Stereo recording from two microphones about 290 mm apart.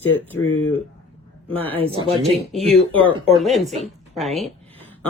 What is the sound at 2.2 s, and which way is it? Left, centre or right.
Speech, centre.